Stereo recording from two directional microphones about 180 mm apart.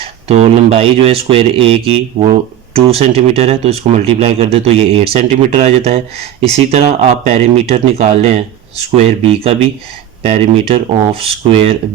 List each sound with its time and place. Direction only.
0.3 s speech: 35° right (ahead or behind)